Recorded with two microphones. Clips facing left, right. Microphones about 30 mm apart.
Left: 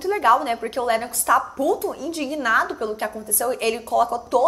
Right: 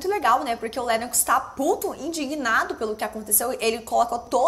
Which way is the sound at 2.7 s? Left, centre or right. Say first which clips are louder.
Left 1 dB; centre.